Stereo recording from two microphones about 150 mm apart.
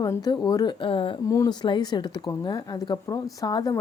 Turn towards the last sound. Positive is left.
turn(degrees=25)  # may be behind; listen again after turning